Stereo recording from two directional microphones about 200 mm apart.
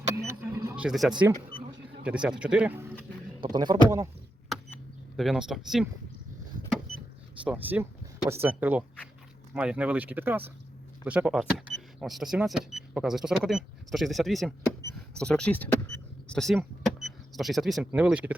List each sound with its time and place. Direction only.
0.3 s power windows: 15° right (ahead or behind)
0.9 s speech: centre (ahead or behind)
3.5 s speech: 20° right (ahead or behind)
4.4 s power windows: centre (ahead or behind)
7.4 s speech: 10° right (ahead or behind)